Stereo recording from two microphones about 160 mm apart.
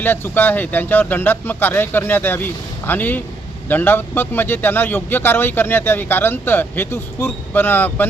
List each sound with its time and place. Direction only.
0.0 s speech: 15° left (ahead or behind)